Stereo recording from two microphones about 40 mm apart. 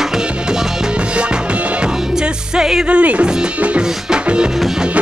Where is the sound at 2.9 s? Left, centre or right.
Right.